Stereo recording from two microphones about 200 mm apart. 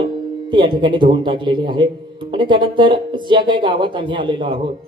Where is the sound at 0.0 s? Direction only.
25° right (ahead or behind).